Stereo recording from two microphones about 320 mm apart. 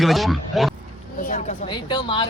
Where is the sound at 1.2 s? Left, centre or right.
Left.